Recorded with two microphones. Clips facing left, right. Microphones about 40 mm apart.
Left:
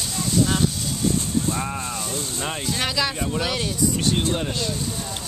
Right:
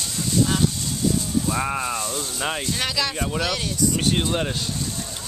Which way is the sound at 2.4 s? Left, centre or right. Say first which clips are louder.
Right 4 dB; centre.